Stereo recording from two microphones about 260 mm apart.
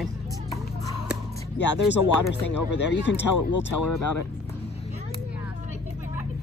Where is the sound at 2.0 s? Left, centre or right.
Left.